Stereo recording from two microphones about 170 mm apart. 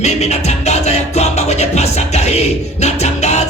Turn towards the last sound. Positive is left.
turn(degrees=40)  # may be behind; listen again after turning